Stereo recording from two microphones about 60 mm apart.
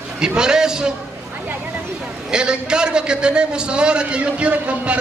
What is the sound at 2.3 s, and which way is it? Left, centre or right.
A man's voice, centre.